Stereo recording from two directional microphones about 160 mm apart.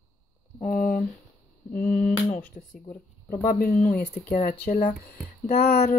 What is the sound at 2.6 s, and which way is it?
Speech, 45° left (ahead or behind).